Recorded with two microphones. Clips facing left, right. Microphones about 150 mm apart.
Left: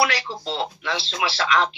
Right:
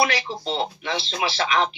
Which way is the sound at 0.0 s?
20° right (ahead or behind).